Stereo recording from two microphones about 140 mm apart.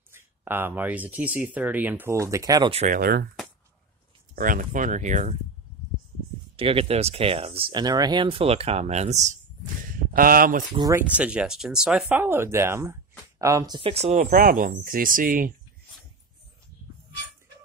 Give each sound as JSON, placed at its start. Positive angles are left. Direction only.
{"t": 0.1, "sound": "speech", "side_deg": -15}
{"t": 2.9, "sound": "speech", "side_deg": -90}
{"t": 4.4, "sound": "speech", "side_deg": -75}
{"t": 6.5, "sound": "speech", "side_deg": -40}
{"t": 10.1, "sound": "speech", "side_deg": -90}
{"t": 10.8, "sound": "speech", "side_deg": -20}
{"t": 11.1, "sound": "speech", "side_deg": -10}
{"t": 12.1, "sound": "speech", "side_deg": -15}
{"t": 13.7, "sound": "speech", "side_deg": -40}